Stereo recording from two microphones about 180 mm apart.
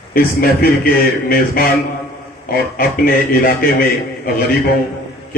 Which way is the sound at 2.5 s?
55° left (ahead or behind).